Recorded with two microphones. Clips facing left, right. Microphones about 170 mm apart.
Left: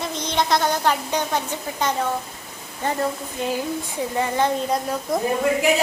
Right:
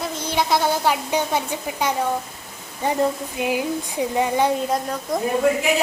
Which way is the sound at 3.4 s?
15° right (ahead or behind).